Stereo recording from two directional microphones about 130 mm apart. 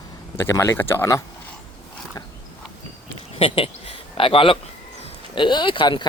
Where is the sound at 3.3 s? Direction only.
45° left (ahead or behind).